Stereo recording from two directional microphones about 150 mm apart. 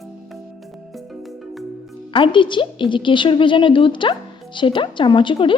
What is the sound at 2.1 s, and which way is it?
A woman's voice, 35° left (ahead or behind).